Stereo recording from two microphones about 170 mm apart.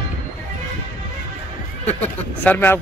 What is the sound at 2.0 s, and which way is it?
Speech, 10° left (ahead or behind).